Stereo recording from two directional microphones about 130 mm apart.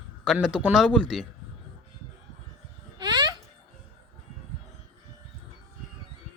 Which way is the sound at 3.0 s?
30° right (ahead or behind).